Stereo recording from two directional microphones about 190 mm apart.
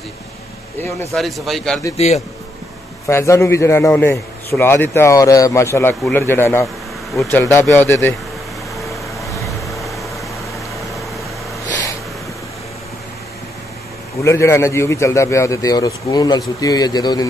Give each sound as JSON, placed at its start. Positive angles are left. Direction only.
{"t": 1.1, "sound": "a man's voice", "side_deg": 0}
{"t": 2.0, "sound": "a man's voice", "side_deg": 35}
{"t": 3.1, "sound": "a man's voice", "side_deg": 15}
{"t": 9.5, "sound": "vehicle", "side_deg": 0}
{"t": 14.2, "sound": "a man's voice", "side_deg": 15}